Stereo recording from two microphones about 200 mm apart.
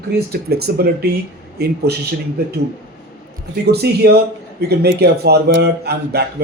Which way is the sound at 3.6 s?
55° right (ahead or behind).